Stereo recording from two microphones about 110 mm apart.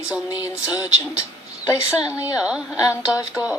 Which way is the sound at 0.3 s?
35° left (ahead or behind).